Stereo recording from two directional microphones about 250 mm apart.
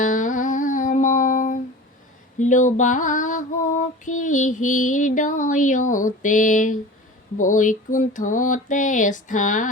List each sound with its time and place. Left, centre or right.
0.0 s music: left
2.4 s female singing: left
7.3 s a sound: left